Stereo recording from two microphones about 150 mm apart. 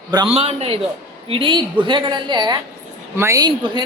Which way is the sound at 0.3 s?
40° right (ahead or behind).